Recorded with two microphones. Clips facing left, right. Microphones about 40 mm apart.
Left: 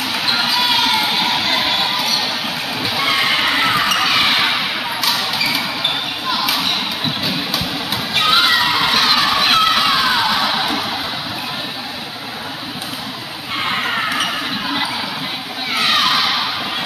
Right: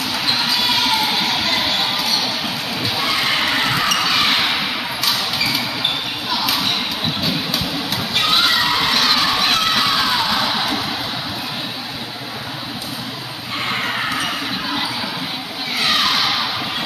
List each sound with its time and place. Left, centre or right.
0.4 s crowd: centre
3.0 s basketball bounce: centre
8.1 s crowd: centre
9.0 s children shouting: centre
9.8 s music: centre
16.0 s a sound: centre